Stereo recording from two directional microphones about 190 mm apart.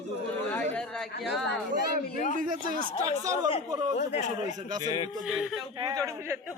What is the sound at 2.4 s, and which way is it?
Speech, 45° right (ahead or behind).